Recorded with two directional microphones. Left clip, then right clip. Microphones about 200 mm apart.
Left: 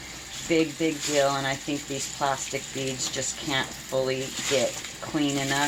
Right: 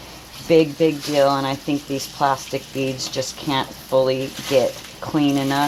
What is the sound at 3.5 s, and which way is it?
Speech, 45° right (ahead or behind).